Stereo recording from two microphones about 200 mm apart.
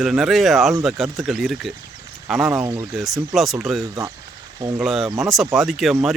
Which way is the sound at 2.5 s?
15° right (ahead or behind).